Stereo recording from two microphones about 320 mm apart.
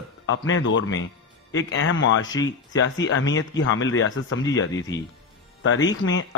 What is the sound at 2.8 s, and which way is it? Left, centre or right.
A man's voice, left.